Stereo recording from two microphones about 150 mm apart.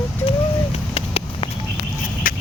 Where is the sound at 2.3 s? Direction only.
70° left (ahead or behind).